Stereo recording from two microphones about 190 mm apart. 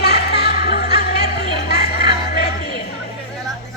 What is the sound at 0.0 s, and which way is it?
Music, 55° left (ahead or behind).